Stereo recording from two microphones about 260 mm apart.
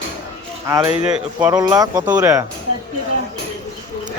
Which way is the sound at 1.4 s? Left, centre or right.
Centre.